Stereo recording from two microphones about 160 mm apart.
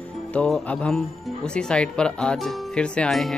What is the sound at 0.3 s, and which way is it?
Speech, 5° left (ahead or behind).